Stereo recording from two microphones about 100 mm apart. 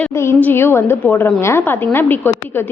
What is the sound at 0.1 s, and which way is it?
A woman's voice, 25° left (ahead or behind).